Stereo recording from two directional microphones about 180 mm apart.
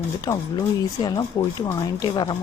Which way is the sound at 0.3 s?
25° left (ahead or behind).